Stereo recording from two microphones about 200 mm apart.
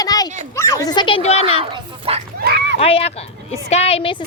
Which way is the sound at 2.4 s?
55° right (ahead or behind).